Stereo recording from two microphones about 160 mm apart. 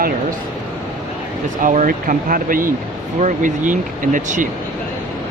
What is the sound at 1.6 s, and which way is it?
Speech, 55° right (ahead or behind).